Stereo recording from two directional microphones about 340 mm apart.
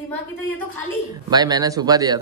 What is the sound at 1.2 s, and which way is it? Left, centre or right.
Speech, centre.